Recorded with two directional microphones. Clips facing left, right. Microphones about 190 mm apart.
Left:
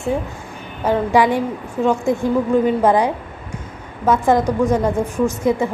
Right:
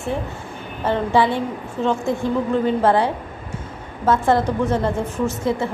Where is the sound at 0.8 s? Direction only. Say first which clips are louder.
Left 3 dB; 15° left (ahead or behind).